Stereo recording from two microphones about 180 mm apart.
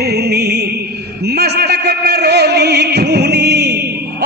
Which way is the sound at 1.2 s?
65° right (ahead or behind).